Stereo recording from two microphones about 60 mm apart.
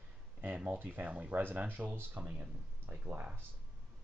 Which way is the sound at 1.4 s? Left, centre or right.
Right.